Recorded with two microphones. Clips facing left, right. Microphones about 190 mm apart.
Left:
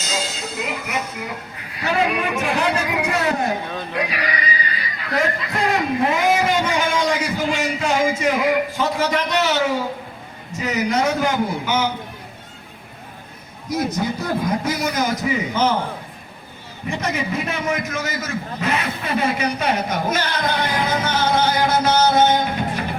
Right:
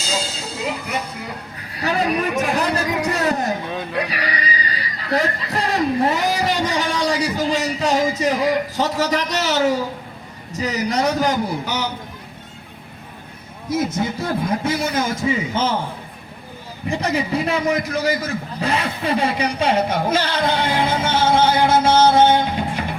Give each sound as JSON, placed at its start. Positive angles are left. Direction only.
{"t": 0.0, "sound": "a sound", "side_deg": -30}
{"t": 1.8, "sound": "a man's voice", "side_deg": -40}
{"t": 3.9, "sound": "a sound", "side_deg": -35}
{"t": 10.5, "sound": "a man's voice", "side_deg": -35}
{"t": 13.7, "sound": "a man's voice", "side_deg": -25}
{"t": 16.9, "sound": "a man's voice", "side_deg": -35}